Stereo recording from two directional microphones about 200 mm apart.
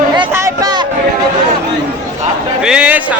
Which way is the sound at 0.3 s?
15° right (ahead or behind).